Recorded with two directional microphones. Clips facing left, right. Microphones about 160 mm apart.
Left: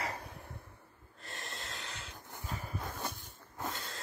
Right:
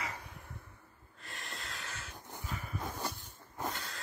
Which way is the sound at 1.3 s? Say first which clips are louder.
Left 1 dB; centre (ahead or behind).